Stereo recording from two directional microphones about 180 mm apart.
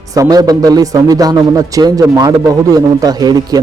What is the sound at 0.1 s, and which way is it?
A man's voice, 20° right (ahead or behind).